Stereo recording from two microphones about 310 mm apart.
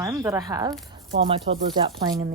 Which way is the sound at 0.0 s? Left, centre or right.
Centre.